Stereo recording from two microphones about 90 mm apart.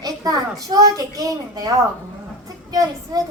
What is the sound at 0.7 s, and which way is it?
A child's voice, 45° right (ahead or behind).